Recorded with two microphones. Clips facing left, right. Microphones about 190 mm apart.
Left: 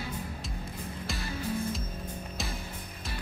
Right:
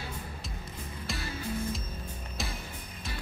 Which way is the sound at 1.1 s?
Centre (ahead or behind).